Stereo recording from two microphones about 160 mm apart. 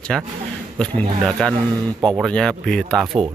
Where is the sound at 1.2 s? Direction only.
5° left (ahead or behind).